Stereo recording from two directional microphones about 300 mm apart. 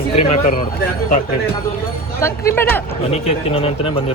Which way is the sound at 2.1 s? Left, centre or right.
Centre.